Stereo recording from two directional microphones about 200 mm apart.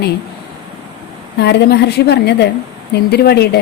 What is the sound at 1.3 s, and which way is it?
A woman's voice, 55° left (ahead or behind).